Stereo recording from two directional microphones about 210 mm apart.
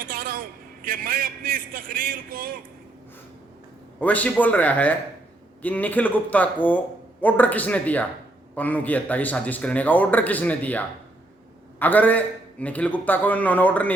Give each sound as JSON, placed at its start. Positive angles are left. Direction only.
{"t": 0.0, "sound": "a sound", "side_deg": -45}
{"t": 0.9, "sound": "a man's voice", "side_deg": -40}
{"t": 4.0, "sound": "speech", "side_deg": 5}